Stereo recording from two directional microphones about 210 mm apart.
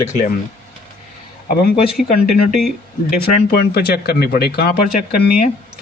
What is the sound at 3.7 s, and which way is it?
Speech, 45° left (ahead or behind).